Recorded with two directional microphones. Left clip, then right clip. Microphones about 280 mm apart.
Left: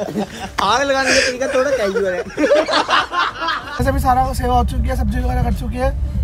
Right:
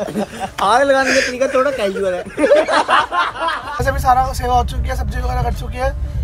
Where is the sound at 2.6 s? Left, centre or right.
Right.